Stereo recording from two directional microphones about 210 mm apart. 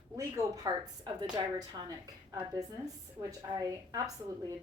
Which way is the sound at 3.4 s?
15° right (ahead or behind).